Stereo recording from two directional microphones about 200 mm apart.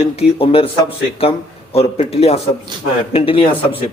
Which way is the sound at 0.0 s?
30° left (ahead or behind).